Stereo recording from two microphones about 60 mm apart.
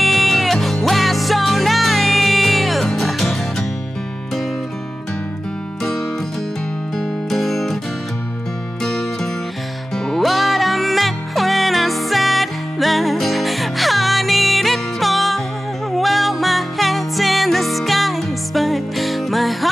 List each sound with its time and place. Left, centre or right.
0.0 s music: centre
7.2 s music: centre
8.8 s music: centre